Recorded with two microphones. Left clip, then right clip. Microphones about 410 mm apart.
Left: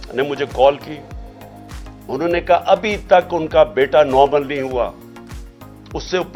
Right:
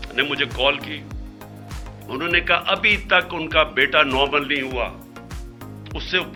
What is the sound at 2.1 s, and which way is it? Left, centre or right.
Speech, left.